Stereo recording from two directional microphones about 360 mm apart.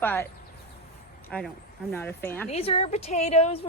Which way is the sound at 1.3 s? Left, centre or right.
Centre.